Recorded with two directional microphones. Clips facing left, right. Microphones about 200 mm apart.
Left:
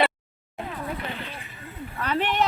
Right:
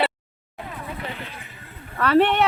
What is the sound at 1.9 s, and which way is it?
Speech, 70° right (ahead or behind).